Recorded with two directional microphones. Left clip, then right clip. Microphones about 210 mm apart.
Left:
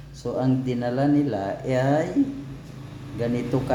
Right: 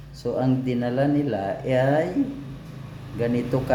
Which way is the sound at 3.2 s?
5° right (ahead or behind).